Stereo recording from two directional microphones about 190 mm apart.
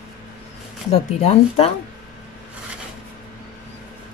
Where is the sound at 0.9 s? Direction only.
35° left (ahead or behind).